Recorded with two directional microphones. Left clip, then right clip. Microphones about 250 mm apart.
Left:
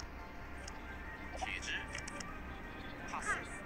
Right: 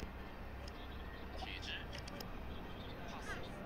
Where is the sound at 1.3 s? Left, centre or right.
Centre.